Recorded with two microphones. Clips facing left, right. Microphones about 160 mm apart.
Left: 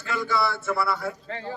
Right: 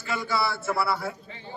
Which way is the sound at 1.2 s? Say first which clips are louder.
Left 8 dB; 90° left.